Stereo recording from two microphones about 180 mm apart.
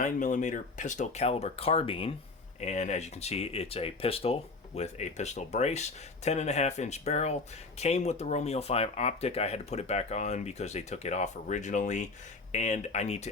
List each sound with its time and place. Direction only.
0.0 s speech: 45° left (ahead or behind)